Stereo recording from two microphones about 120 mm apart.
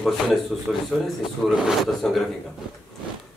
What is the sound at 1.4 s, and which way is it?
Speech, centre (ahead or behind).